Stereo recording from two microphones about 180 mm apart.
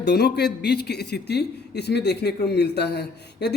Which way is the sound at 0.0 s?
65° left (ahead or behind).